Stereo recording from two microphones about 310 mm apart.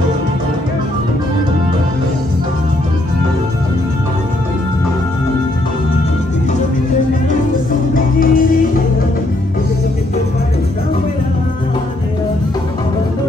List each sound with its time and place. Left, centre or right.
7.9 s music: left